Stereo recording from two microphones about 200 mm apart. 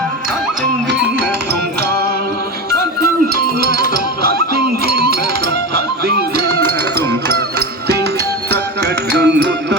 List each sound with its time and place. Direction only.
3.8 s music: 50° right (ahead or behind)
5.7 s music: 55° right (ahead or behind)
8.4 s music: 55° right (ahead or behind)